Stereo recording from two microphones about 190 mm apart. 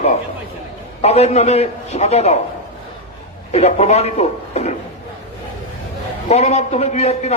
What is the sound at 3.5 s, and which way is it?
A man's voice, 35° left (ahead or behind).